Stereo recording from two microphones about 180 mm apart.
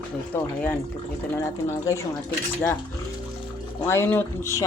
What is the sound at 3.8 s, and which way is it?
Speech, 10° left (ahead or behind).